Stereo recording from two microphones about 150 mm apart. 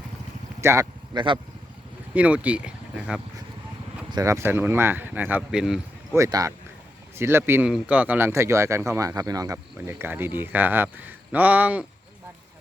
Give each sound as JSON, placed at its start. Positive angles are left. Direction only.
{"t": 0.6, "sound": "speech", "side_deg": -15}
{"t": 1.1, "sound": "speech", "side_deg": -35}
{"t": 2.1, "sound": "speech", "side_deg": -10}
{"t": 4.1, "sound": "speech", "side_deg": -20}
{"t": 6.1, "sound": "speech", "side_deg": -20}